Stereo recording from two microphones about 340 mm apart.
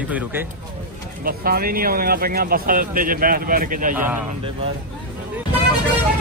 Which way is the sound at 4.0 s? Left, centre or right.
Centre.